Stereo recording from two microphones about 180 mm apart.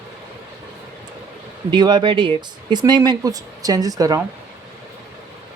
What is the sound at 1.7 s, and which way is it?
Speech, 25° right (ahead or behind).